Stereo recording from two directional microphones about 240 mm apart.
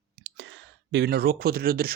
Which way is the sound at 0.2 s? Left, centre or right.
Right.